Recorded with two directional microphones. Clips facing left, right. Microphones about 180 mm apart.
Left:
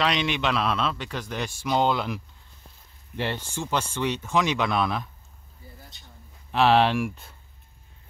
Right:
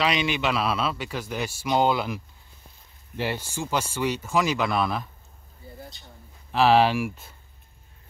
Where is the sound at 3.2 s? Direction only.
10° right (ahead or behind).